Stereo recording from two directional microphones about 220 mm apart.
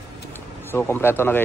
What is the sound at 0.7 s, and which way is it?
Speech, 10° left (ahead or behind).